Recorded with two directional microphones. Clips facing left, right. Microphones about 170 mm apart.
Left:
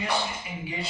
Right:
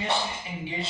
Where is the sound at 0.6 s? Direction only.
25° right (ahead or behind).